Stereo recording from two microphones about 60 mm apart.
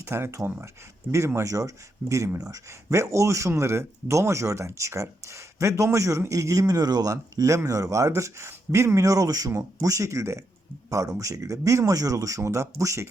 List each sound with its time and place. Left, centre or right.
0.0 s speech: right
1.4 s speech: right
9.0 s speech: right
9.5 s speech: right
10.8 s speech: right
12.4 s speech: right